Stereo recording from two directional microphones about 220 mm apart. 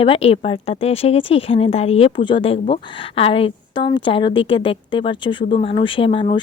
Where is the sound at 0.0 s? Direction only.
25° left (ahead or behind).